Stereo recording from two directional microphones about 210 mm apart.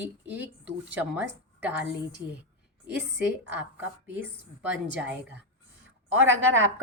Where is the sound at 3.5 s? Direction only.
10° right (ahead or behind).